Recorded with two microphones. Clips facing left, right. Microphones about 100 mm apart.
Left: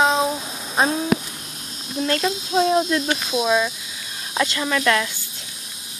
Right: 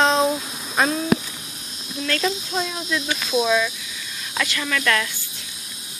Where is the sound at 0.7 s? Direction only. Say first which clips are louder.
Left 1 dB; 30° left (ahead or behind).